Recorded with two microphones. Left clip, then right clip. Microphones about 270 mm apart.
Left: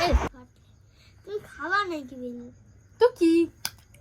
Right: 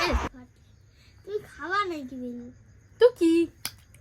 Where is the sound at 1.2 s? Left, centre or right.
Centre.